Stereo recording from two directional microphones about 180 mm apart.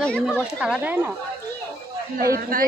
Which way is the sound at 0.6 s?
5° right (ahead or behind).